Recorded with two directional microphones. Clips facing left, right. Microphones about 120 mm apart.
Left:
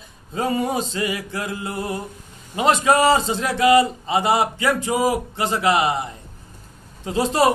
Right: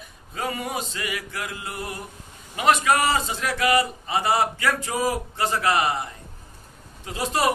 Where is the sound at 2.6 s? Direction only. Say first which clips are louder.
Left 3 dB; 25° left (ahead or behind).